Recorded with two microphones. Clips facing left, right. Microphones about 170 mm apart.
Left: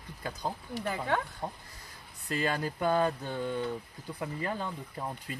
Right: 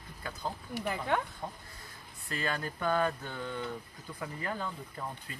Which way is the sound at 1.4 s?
20° left (ahead or behind).